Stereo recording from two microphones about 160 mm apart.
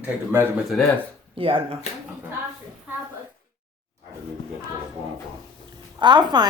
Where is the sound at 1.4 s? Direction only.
35° right (ahead or behind).